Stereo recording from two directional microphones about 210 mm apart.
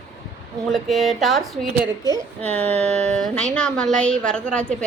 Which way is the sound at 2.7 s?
30° right (ahead or behind).